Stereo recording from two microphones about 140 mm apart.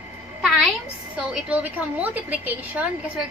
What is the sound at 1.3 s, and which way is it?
A woman's voice, 10° right (ahead or behind).